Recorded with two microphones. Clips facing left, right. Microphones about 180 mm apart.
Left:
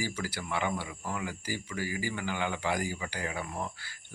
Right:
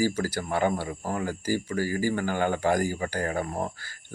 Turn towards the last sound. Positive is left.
turn(degrees=-45)  # may be behind; listen again after turning